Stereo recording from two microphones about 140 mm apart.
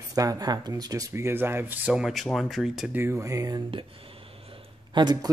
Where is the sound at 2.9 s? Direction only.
15° right (ahead or behind).